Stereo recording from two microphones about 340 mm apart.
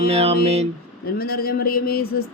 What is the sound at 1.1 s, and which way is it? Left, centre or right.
Speech, left.